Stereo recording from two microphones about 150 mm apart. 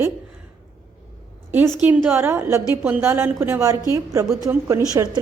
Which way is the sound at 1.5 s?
15° right (ahead or behind).